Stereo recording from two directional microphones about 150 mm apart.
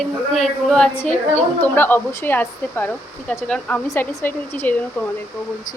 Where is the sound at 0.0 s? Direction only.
Centre (ahead or behind).